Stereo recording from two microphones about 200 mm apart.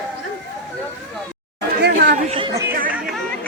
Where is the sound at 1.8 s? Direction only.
55° right (ahead or behind).